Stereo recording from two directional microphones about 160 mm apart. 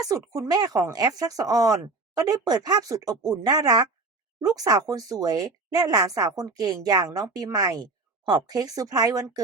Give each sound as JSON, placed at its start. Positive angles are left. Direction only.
{"t": 0.0, "sound": "speech", "side_deg": -20}